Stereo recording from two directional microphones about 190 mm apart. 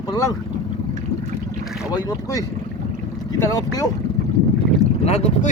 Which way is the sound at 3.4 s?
15° left (ahead or behind).